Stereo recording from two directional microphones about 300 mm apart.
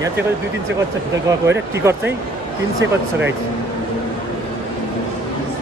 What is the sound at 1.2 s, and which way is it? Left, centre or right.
Speech, centre.